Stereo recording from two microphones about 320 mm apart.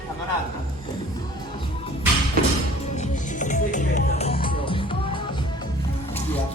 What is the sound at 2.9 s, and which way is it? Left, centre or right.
Music, left.